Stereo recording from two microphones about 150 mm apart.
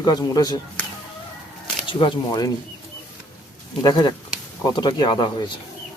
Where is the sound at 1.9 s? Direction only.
35° left (ahead or behind).